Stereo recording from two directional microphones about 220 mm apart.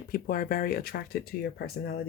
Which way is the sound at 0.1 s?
40° left (ahead or behind).